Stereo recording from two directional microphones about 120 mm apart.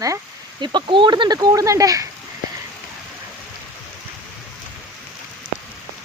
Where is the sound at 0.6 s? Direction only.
40° right (ahead or behind).